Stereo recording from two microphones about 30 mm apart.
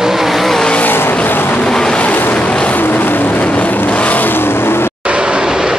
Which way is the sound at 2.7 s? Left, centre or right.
Left.